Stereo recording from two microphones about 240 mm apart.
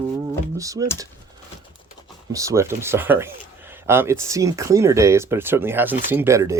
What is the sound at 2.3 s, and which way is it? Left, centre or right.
Speech, centre.